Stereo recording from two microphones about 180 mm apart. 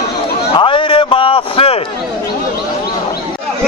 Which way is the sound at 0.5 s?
30° left (ahead or behind).